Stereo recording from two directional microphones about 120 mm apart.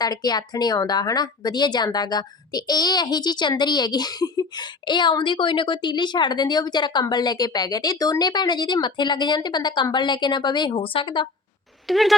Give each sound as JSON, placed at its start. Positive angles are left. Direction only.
{"t": 0.0, "sound": "a woman's voice", "side_deg": 35}
{"t": 11.9, "sound": "speech", "side_deg": 0}